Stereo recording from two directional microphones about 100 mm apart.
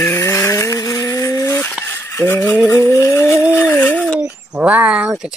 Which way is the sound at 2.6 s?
30° left (ahead or behind).